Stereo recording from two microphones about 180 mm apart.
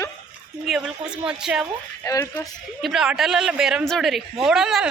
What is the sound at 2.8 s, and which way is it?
A woman's voice, 5° right (ahead or behind).